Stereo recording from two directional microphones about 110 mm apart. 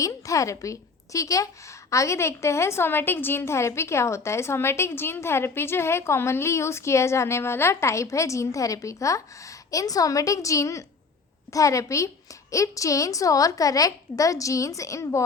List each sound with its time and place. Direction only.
0.0 s a woman's voice: 30° left (ahead or behind)